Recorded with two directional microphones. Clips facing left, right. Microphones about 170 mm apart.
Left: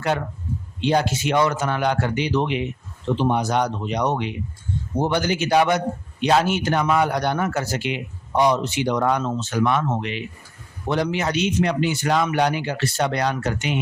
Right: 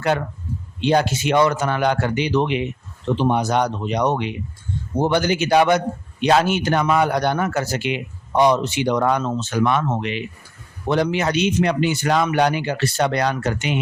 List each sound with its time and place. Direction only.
0.9 s speech: 70° right (ahead or behind)